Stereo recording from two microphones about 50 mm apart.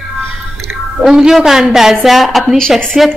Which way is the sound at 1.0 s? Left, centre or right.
Centre.